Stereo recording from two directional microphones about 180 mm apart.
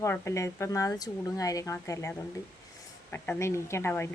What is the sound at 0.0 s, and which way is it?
Speech, 15° left (ahead or behind).